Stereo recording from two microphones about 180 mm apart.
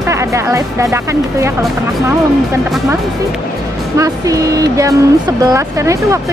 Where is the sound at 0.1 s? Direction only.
15° right (ahead or behind).